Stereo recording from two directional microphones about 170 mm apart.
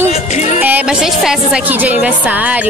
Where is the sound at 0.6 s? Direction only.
10° right (ahead or behind).